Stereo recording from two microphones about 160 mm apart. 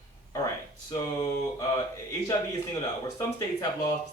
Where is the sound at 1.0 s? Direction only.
20° left (ahead or behind).